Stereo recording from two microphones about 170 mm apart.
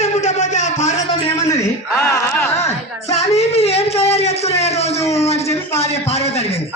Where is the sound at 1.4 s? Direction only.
15° left (ahead or behind).